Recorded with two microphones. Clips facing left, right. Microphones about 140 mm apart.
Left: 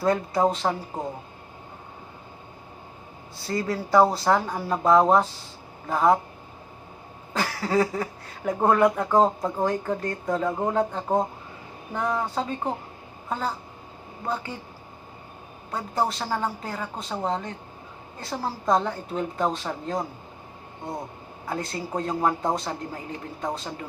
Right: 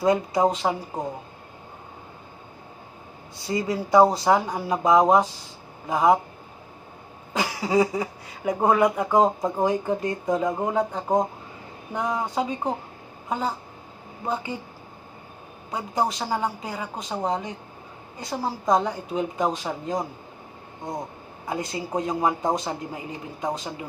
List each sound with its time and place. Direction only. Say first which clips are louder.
0.0 s speech: right 2 dB; 15° right (ahead or behind)
3.4 s speech: right 1 dB; 15° right (ahead or behind)
7.3 s speech: right 2 dB; 15° right (ahead or behind)
15.7 s speech: right 1 dB; 15° right (ahead or behind)
21.4 s speech: right 1 dB; 15° right (ahead or behind)